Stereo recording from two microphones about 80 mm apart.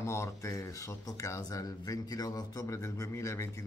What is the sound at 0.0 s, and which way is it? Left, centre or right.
A man's voice, left.